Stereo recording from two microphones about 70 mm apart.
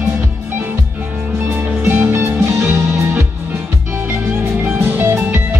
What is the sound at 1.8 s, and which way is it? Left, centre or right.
Music, right.